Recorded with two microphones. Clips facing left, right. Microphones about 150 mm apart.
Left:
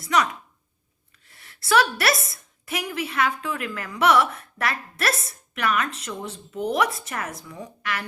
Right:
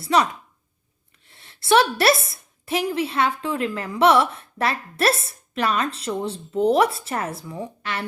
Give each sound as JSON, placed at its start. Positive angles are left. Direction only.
{"t": 0.0, "sound": "a woman's voice", "side_deg": -30}